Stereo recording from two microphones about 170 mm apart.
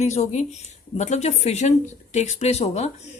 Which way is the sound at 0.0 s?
40° left (ahead or behind).